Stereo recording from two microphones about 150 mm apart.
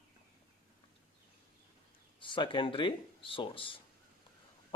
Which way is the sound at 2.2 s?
35° left (ahead or behind).